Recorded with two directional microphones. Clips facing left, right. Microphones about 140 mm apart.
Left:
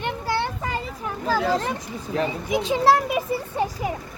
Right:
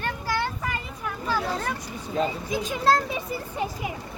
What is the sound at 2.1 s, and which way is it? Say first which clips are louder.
Speech: left 2 dB; 75° left (ahead or behind).